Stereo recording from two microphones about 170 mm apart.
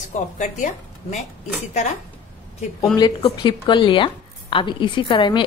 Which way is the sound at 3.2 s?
30° left (ahead or behind).